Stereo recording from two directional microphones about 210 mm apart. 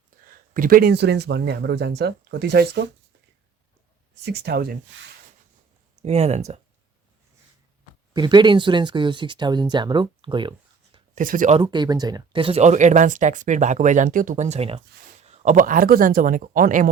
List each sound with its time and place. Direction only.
0.3 s speech: 40° right (ahead or behind)
4.2 s speech: 50° right (ahead or behind)
4.9 s speech: 60° right (ahead or behind)
6.0 s speech: 30° right (ahead or behind)
8.1 s speech: 20° right (ahead or behind)
11.1 s speech: 40° right (ahead or behind)
11.6 s speech: 20° right (ahead or behind); by 16.9 s 40° right (ahead or behind)